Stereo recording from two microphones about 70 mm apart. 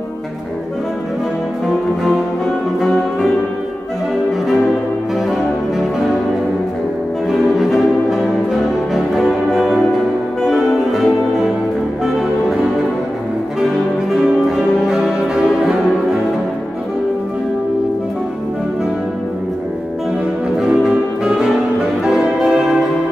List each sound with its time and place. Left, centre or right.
5.3 s music: centre
7.2 s music: centre
14.1 s music: centre
20.5 s brass instrument: centre
22.0 s music: centre